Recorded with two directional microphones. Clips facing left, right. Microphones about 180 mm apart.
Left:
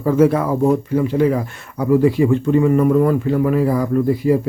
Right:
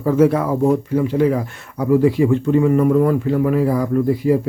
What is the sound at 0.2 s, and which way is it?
Speech, 15° right (ahead or behind).